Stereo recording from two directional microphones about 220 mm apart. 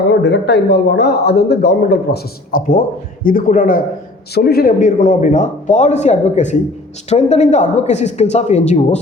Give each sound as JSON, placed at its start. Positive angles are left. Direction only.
{"t": 0.1, "sound": "a man's voice", "side_deg": 50}